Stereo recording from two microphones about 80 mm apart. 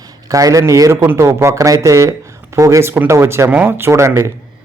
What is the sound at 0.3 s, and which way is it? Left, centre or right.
Speech, right.